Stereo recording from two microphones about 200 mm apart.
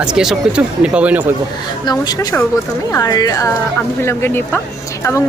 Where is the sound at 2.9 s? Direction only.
20° left (ahead or behind).